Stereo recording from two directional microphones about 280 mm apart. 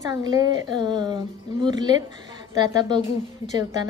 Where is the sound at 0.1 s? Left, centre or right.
Centre.